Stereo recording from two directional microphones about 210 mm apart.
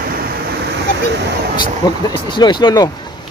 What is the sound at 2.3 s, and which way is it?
Speech, 20° left (ahead or behind).